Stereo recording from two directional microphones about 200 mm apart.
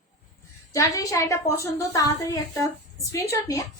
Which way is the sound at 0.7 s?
15° left (ahead or behind).